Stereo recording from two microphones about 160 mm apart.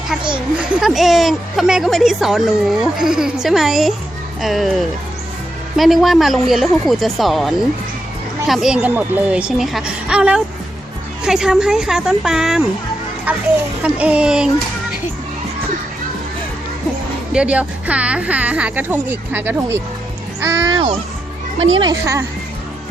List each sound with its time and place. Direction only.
0.7 s a woman's voice: centre (ahead or behind)
17.3 s speech: 10° right (ahead or behind)
21.6 s speech: 30° right (ahead or behind)